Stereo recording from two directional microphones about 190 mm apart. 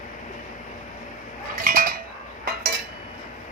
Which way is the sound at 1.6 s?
50° right (ahead or behind).